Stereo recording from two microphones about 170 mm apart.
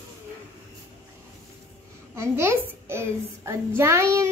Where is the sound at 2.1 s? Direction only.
15° right (ahead or behind).